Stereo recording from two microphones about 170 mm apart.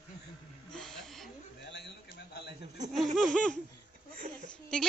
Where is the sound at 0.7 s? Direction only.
5° left (ahead or behind).